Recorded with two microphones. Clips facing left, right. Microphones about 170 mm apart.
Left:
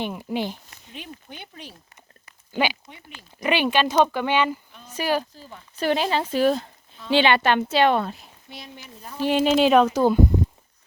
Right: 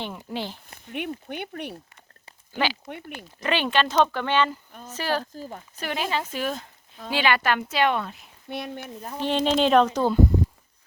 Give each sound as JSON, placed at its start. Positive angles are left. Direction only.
{"t": 0.0, "sound": "speech", "side_deg": 15}
{"t": 0.9, "sound": "speech", "side_deg": -65}
{"t": 2.5, "sound": "speech", "side_deg": 15}
{"t": 5.3, "sound": "speech", "side_deg": -45}
{"t": 5.8, "sound": "a woman's voice", "side_deg": 30}
{"t": 8.4, "sound": "speech", "side_deg": -60}
{"t": 9.2, "sound": "speech", "side_deg": 5}